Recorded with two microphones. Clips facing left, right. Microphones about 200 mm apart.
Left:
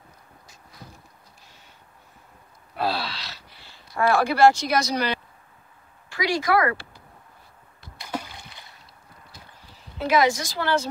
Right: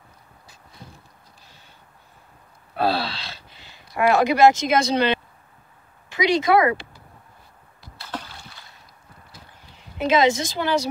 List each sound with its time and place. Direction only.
2.8 s speech: 30° right (ahead or behind)
8.0 s rowboat: 10° left (ahead or behind)
9.9 s a woman's voice: 20° right (ahead or behind)